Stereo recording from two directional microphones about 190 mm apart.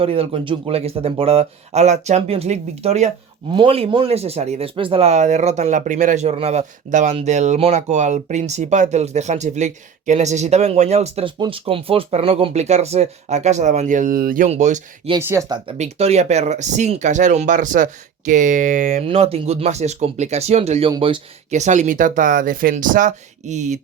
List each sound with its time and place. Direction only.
0.0 s speech: 30° right (ahead or behind)
15.2 s speech: 15° right (ahead or behind)
15.8 s speech: 35° right (ahead or behind)
19.0 s speech: 30° right (ahead or behind)
21.5 s speech: 40° right (ahead or behind)